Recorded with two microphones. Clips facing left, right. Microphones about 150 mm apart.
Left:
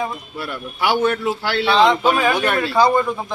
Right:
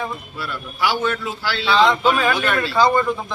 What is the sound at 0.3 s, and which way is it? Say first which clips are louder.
Speech: left 2 dB; 55° left (ahead or behind).